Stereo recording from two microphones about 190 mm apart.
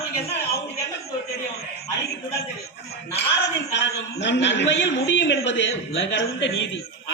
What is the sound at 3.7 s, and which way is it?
A man's voice, 70° left (ahead or behind).